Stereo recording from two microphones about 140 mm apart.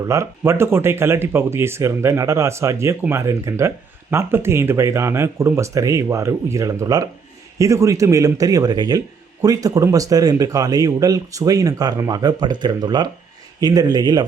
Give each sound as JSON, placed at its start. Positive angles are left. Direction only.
{"t": 0.0, "sound": "speech", "side_deg": -20}